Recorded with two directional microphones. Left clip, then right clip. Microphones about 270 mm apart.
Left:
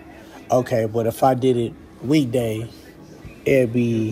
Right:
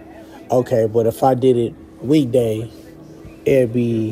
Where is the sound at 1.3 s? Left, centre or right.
Centre.